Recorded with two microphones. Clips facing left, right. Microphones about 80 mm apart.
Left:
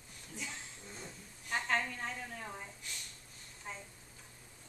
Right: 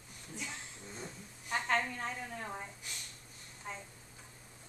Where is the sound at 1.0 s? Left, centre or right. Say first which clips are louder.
Right 3 dB; centre.